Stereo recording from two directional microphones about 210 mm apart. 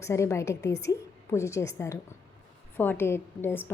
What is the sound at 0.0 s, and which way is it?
A woman's voice, 15° left (ahead or behind).